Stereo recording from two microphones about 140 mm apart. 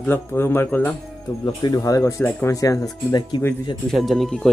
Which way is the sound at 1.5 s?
25° left (ahead or behind).